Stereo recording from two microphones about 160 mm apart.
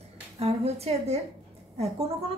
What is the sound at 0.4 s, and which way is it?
A woman's voice, 40° right (ahead or behind).